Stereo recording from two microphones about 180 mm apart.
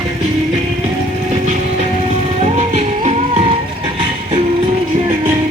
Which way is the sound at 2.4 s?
40° right (ahead or behind).